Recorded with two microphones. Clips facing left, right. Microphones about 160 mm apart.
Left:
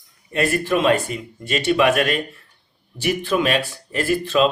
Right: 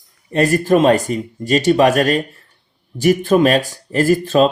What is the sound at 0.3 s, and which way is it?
Speech, 40° right (ahead or behind).